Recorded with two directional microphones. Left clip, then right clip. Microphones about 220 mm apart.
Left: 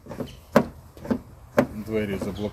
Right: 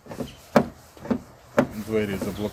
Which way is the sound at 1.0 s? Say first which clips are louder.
Even; 10° left (ahead or behind).